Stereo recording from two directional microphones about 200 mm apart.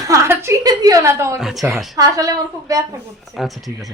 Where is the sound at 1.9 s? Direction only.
15° right (ahead or behind).